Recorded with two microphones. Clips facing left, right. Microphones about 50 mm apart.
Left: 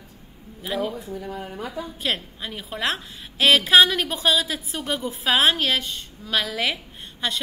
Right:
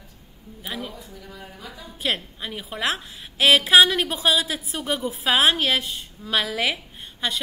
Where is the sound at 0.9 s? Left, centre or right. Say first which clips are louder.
Left 9 dB; left.